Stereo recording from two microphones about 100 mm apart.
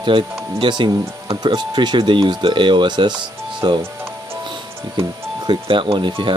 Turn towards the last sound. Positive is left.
turn(degrees=-55)  # may be behind; listen again after turning